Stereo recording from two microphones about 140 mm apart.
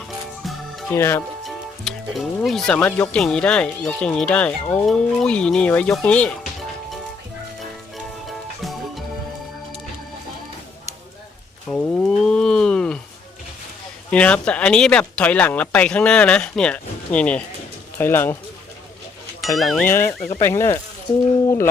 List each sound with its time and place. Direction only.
0.9 s speech: 15° left (ahead or behind)
1.5 s speech: centre (ahead or behind)
11.7 s a sound: 10° left (ahead or behind)
14.1 s speech: 10° left (ahead or behind)
19.5 s speech: centre (ahead or behind)
19.8 s speech: 15° left (ahead or behind)